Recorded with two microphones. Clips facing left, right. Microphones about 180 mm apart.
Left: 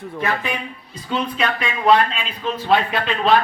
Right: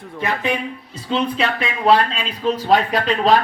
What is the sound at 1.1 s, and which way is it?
Speech, 25° right (ahead or behind).